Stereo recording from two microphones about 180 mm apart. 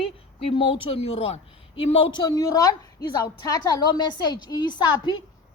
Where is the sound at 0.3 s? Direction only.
30° left (ahead or behind).